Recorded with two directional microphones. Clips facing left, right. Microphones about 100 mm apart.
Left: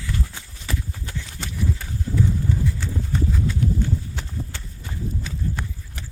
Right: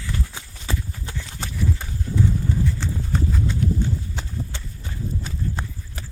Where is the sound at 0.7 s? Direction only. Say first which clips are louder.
Even; 25° right (ahead or behind).